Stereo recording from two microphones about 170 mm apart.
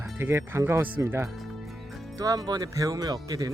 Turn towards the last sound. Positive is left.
turn(degrees=-20)  # may be behind; listen again after turning